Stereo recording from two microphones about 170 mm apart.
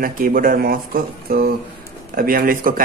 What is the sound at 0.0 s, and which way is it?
Speech, 55° right (ahead or behind).